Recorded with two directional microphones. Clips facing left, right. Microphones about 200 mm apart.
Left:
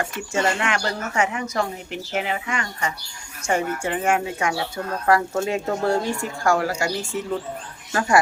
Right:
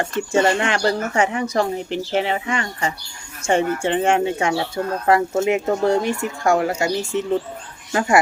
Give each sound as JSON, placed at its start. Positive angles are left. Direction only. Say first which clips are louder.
{"t": 0.3, "sound": "speech", "louder": "right 4 dB", "side_deg": -30}